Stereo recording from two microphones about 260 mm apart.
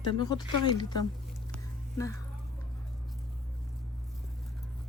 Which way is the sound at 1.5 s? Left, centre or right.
Centre.